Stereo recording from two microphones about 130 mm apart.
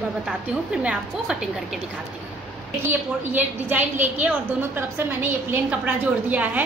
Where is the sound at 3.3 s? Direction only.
15° right (ahead or behind).